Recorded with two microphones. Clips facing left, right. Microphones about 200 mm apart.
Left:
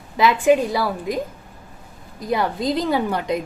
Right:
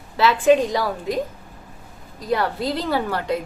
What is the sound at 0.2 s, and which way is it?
A woman's voice, 10° left (ahead or behind).